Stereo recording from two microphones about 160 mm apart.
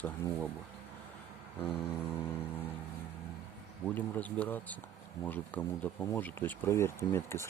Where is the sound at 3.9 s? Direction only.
10° left (ahead or behind).